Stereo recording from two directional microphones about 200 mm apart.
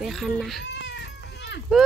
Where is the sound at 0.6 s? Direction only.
60° left (ahead or behind).